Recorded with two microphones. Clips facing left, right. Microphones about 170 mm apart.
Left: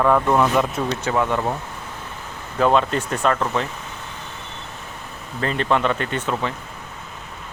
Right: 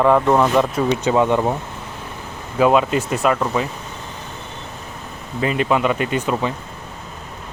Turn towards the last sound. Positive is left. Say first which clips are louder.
# right 4 dB
turn(degrees=-15)  # may be behind; listen again after turning